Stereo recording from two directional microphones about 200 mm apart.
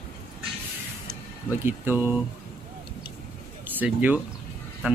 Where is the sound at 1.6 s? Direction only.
10° right (ahead or behind).